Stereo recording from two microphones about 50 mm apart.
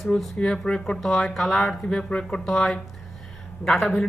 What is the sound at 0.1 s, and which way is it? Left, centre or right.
Speech, left.